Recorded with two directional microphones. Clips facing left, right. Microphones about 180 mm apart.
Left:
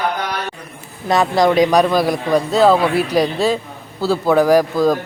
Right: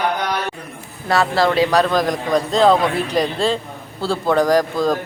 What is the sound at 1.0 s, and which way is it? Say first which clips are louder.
A man's voice: left 3 dB; 15° left (ahead or behind).